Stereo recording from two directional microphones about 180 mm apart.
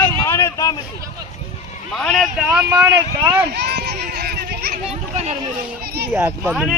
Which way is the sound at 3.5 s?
65° right (ahead or behind).